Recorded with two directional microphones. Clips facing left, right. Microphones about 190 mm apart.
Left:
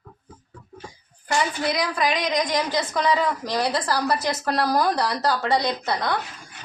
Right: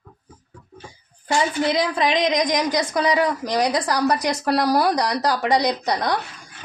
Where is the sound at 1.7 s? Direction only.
25° right (ahead or behind).